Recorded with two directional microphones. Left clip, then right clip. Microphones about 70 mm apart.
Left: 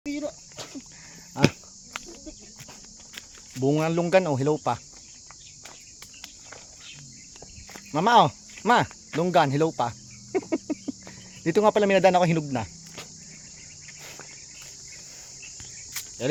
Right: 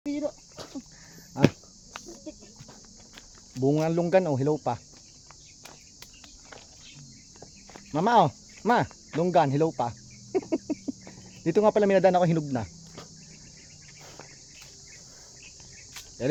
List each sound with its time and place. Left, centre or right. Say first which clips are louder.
0.0 s cricket: right 1 dB; left
3.6 s speech: left 1 dB; centre
7.9 s speech: left 3 dB; centre
10.3 s cricket: left 1 dB; centre
16.2 s speech: left 1 dB; right